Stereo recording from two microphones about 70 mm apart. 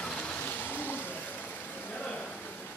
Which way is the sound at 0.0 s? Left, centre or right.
Centre.